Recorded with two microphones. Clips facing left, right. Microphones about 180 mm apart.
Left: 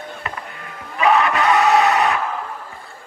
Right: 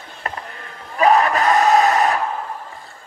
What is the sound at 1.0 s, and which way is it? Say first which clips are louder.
Battle cry: right 1 dB; 40° right (ahead or behind).